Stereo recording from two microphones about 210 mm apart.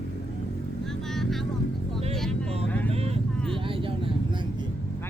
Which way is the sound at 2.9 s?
30° right (ahead or behind).